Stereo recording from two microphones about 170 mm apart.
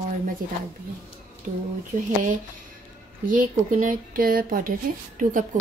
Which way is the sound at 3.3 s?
50° right (ahead or behind).